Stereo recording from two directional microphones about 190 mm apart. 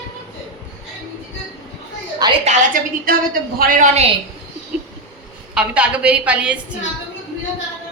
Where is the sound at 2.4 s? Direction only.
45° right (ahead or behind).